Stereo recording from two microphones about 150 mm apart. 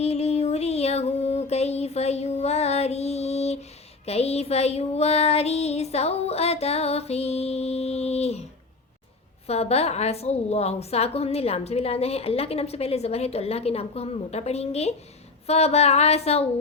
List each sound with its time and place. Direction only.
0.0 s music: 45° left (ahead or behind)
4.0 s child singing: 45° left (ahead or behind)
9.5 s a woman's voice: 45° left (ahead or behind)